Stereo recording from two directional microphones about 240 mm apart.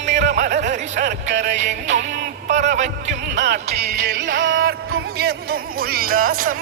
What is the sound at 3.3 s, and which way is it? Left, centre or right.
Music, right.